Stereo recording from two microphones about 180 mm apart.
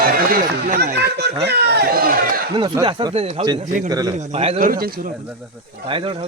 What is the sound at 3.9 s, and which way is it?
Speech, 20° right (ahead or behind).